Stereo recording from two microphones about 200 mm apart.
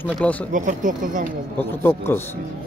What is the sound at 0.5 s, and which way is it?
Speech, 40° right (ahead or behind).